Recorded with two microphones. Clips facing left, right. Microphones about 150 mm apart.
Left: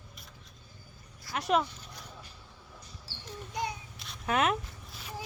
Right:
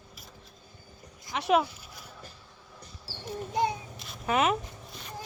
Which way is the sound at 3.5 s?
25° right (ahead or behind).